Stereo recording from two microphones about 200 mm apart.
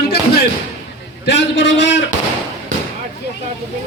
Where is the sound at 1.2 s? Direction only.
60° left (ahead or behind).